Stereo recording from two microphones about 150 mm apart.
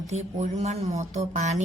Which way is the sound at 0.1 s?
45° right (ahead or behind).